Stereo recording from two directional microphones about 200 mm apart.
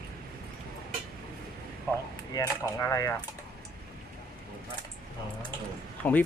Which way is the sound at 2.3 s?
15° left (ahead or behind).